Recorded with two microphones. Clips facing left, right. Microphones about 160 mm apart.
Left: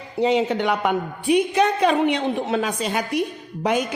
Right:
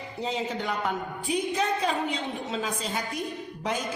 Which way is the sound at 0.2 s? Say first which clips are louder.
Left 11 dB; 70° left (ahead or behind).